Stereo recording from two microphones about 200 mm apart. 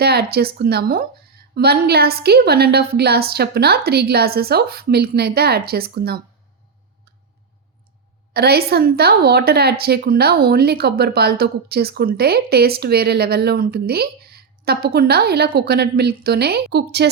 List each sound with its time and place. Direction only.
0.0 s a woman's voice: 50° right (ahead or behind)
8.3 s a woman's voice: 50° right (ahead or behind)